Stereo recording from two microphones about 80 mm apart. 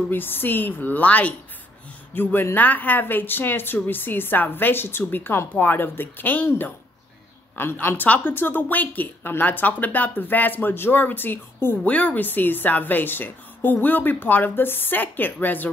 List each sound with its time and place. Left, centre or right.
0.1 s a woman's voice: left